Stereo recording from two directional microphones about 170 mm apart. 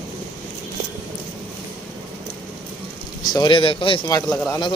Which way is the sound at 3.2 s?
25° left (ahead or behind).